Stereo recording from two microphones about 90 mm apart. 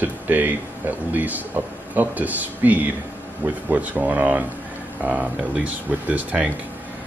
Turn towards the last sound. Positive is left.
turn(degrees=-15)  # may be behind; listen again after turning